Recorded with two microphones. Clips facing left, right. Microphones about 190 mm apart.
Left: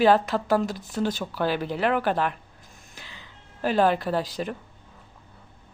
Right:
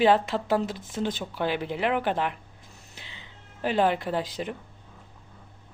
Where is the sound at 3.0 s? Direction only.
20° right (ahead or behind).